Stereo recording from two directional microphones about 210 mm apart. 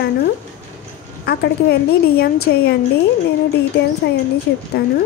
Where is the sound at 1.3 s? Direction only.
50° left (ahead or behind).